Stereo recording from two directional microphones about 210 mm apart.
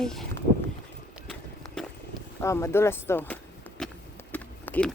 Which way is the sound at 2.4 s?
15° left (ahead or behind).